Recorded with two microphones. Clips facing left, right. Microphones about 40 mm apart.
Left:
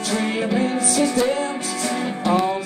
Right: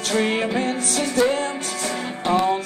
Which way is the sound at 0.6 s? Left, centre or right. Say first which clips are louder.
Left 4 dB; right.